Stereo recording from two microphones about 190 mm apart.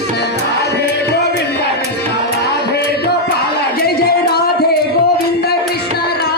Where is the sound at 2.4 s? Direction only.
55° left (ahead or behind).